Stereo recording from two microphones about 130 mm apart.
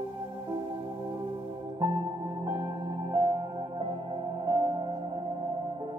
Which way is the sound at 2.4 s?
30° right (ahead or behind).